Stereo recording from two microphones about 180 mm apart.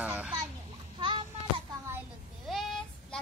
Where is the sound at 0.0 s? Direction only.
10° right (ahead or behind).